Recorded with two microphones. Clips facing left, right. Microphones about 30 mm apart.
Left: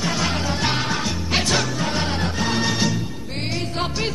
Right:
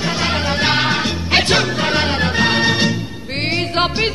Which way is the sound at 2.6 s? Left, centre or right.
Right.